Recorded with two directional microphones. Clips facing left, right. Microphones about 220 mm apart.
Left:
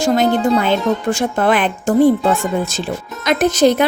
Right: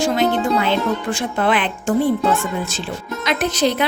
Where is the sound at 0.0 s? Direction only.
45° left (ahead or behind).